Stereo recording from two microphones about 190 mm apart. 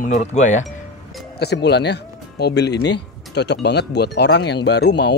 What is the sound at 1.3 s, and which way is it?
Speech, 60° left (ahead or behind).